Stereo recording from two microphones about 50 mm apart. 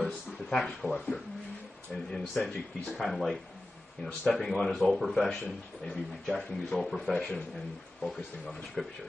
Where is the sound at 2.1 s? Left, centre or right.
Centre.